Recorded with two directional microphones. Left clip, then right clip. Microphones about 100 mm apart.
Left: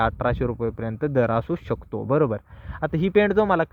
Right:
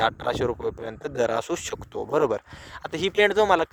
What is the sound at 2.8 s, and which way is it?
Speech, 30° right (ahead or behind).